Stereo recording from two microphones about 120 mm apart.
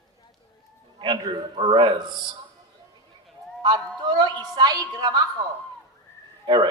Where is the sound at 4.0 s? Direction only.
40° right (ahead or behind).